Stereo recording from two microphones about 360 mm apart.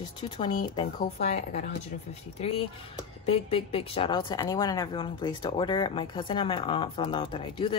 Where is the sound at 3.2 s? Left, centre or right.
Centre.